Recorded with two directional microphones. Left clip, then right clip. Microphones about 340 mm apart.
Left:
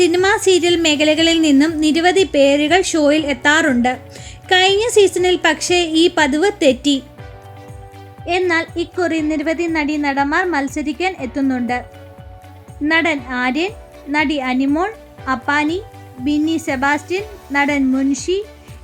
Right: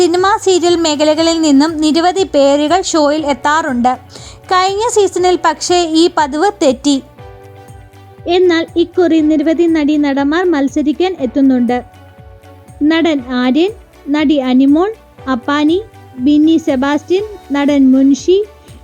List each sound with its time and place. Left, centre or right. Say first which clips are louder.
0.0 s a woman's voice: right 3 dB; centre
8.2 s a woman's voice: right 6 dB; centre
12.8 s a woman's voice: right 4 dB; centre